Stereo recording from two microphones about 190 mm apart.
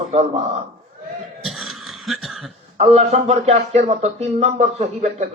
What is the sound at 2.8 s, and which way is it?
Speech, 35° right (ahead or behind).